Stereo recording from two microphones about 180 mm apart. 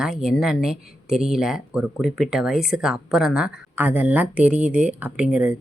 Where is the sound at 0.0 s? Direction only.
5° right (ahead or behind).